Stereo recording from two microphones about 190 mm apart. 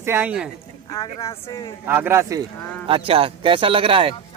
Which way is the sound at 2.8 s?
30° right (ahead or behind).